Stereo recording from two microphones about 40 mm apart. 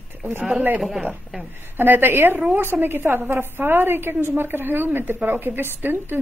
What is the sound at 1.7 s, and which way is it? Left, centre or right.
A woman's voice, right.